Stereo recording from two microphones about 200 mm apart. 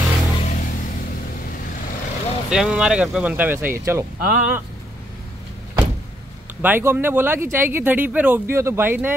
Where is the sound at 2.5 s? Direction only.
5° right (ahead or behind).